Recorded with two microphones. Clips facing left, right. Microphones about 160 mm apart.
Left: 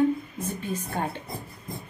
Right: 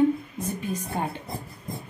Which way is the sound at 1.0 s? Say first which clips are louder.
Even; 15° right (ahead or behind).